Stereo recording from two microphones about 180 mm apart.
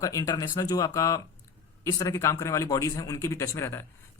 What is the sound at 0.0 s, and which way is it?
A man's voice, 20° left (ahead or behind).